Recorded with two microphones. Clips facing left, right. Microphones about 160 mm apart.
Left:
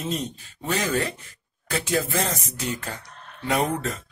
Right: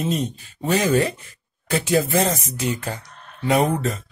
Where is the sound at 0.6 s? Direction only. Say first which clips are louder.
Right 6 dB; 15° right (ahead or behind).